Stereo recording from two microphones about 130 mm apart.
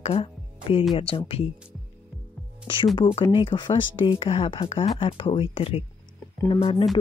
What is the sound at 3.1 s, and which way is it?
Speech, 40° left (ahead or behind).